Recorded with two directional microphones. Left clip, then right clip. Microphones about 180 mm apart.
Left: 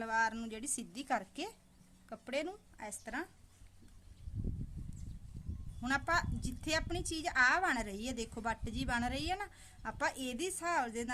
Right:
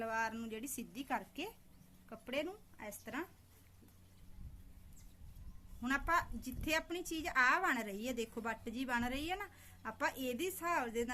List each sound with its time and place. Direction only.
0.0 s a woman's voice: 40° left (ahead or behind)
5.8 s a woman's voice: 40° left (ahead or behind)